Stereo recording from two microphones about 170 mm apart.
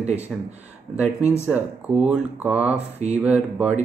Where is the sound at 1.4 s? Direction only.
10° right (ahead or behind).